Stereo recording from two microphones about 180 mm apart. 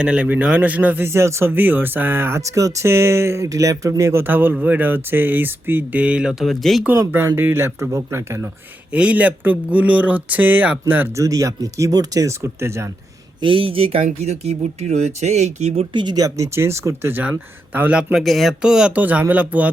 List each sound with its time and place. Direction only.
0.0 s speech: 5° right (ahead or behind)
6.9 s speech: 15° right (ahead or behind)
13.4 s speech: 30° right (ahead or behind); by 19.7 s 10° right (ahead or behind)